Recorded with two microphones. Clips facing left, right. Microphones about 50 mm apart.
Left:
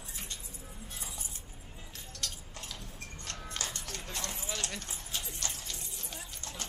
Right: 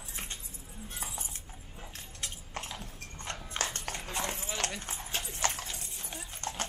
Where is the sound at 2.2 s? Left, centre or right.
Right.